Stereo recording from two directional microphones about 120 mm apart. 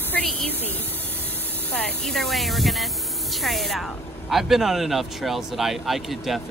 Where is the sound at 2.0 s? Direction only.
Centre (ahead or behind).